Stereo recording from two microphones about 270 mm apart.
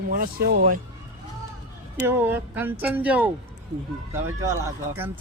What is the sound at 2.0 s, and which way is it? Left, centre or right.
Speech, centre.